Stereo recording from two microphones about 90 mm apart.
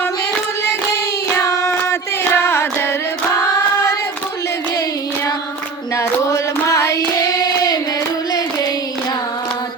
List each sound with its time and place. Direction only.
1.4 s a sound: 35° left (ahead or behind)
6.0 s child singing: 35° left (ahead or behind)
7.2 s hands: 40° left (ahead or behind)